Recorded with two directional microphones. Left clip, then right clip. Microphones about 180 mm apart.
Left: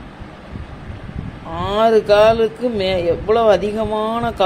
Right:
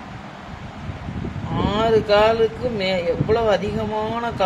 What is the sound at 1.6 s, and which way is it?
Speech, 30° left (ahead or behind).